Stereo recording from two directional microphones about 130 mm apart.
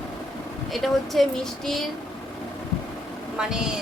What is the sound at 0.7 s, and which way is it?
Speech, centre (ahead or behind).